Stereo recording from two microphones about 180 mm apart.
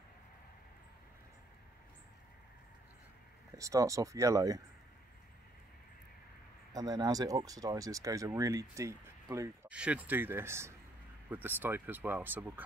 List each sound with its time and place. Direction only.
3.5 s speech: 15° right (ahead or behind)
6.7 s speech: 20° right (ahead or behind)